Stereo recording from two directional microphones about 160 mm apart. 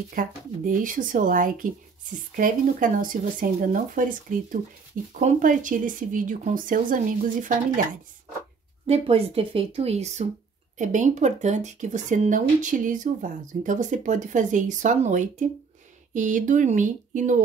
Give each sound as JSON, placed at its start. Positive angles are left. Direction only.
{"t": 0.1, "sound": "speech", "side_deg": -55}
{"t": 8.8, "sound": "speech", "side_deg": -40}